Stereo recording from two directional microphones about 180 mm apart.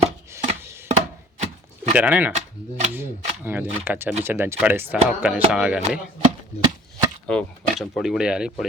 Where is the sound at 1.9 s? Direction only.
10° right (ahead or behind).